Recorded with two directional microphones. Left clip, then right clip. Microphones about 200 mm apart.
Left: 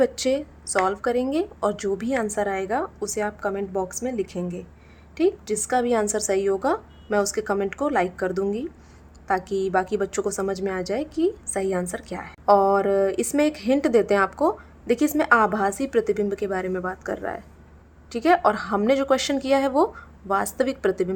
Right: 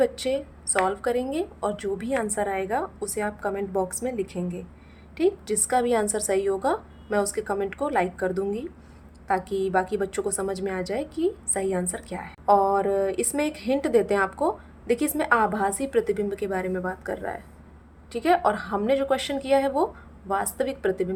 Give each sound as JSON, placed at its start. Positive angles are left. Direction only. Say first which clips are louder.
{"t": 0.0, "sound": "a woman's voice", "louder": "left 2 dB", "side_deg": 20}